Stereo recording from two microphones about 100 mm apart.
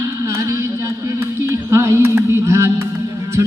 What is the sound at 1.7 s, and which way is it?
Music, 30° right (ahead or behind).